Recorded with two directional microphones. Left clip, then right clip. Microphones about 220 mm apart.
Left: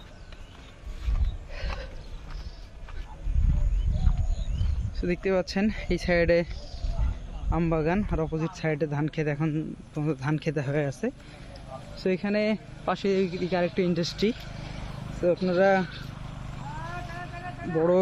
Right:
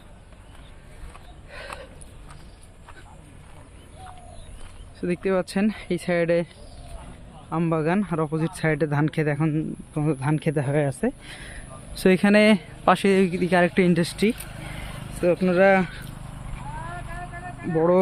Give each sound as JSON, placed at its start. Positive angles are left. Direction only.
{"t": 1.5, "sound": "a sound", "side_deg": -5}
{"t": 4.9, "sound": "speech", "side_deg": -10}
{"t": 7.5, "sound": "speech", "side_deg": -10}
{"t": 11.9, "sound": "speech", "side_deg": -45}
{"t": 14.4, "sound": "vehicle", "side_deg": -50}
{"t": 15.2, "sound": "speech", "side_deg": -25}
{"t": 17.7, "sound": "speech", "side_deg": -25}